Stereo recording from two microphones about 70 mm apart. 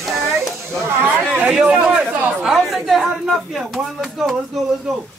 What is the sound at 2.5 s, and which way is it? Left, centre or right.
Speech, centre.